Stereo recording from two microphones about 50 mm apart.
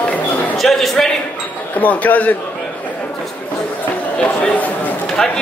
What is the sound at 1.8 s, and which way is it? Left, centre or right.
Speech, left.